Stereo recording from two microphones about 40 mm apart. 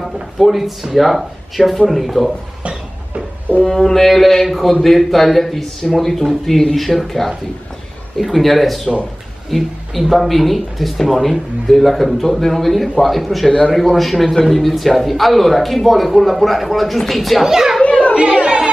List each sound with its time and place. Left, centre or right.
0.0 s a man's voice: centre
3.6 s mantra: centre
4.8 s a man's voice: centre
13.5 s a man's voice: left
13.7 s a man's voice: centre
17.5 s a child's voice: centre
17.8 s chatter: left